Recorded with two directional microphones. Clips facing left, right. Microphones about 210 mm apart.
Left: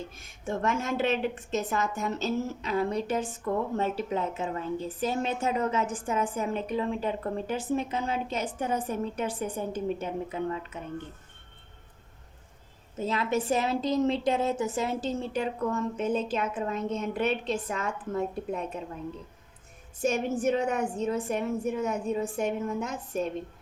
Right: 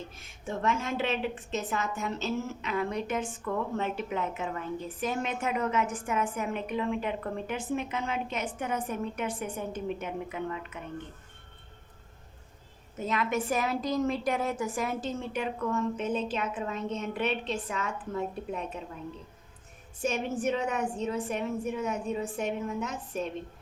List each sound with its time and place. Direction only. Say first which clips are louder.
0.2 s a woman's voice: left 3 dB; 45° left (ahead or behind)
13.0 s a woman's voice: left 2 dB; 30° left (ahead or behind)
20.0 s a woman's voice: left 3 dB; 45° left (ahead or behind)